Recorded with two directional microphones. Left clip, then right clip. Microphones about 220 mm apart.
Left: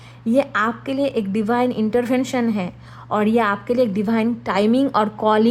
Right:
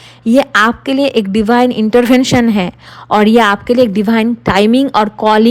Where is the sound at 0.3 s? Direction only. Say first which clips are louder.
Right 9 dB; 35° right (ahead or behind).